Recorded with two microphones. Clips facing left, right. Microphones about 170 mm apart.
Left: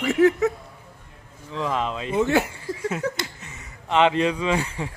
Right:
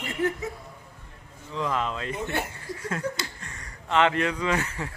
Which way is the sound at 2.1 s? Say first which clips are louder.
Left 14 dB; 90° left.